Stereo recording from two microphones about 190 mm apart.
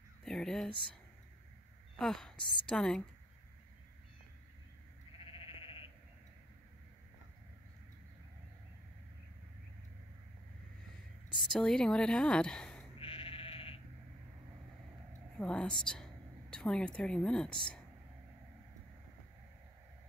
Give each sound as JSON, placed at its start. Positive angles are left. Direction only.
{"t": 0.2, "sound": "speech", "side_deg": 5}
{"t": 2.0, "sound": "a woman's voice", "side_deg": 0}
{"t": 5.2, "sound": "sheep", "side_deg": 30}
{"t": 11.6, "sound": "a woman's voice", "side_deg": 5}
{"t": 13.0, "sound": "sheep", "side_deg": 30}
{"t": 15.3, "sound": "a woman's voice", "side_deg": 5}